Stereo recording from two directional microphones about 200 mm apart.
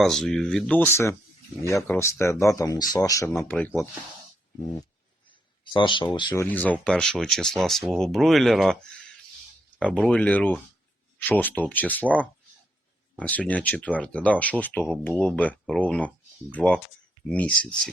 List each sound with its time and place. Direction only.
0.0 s speech: centre (ahead or behind)
5.7 s speech: 25° left (ahead or behind)
6.4 s speech: 10° left (ahead or behind)
13.1 s speech: 5° left (ahead or behind)